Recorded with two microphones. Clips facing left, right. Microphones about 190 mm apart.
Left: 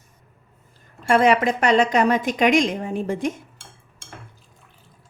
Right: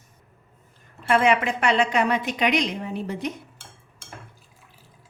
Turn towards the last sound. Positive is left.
turn(degrees=50)  # may be behind; listen again after turning